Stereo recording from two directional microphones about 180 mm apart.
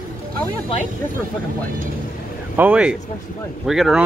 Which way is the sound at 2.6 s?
5° right (ahead or behind).